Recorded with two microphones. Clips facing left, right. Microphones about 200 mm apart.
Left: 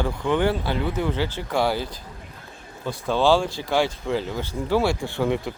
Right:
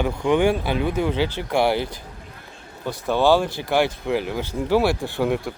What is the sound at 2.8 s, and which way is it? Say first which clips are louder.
Speech: right 1 dB; 15° right (ahead or behind).